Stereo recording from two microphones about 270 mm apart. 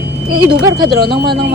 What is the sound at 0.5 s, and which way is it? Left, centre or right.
Speech, right.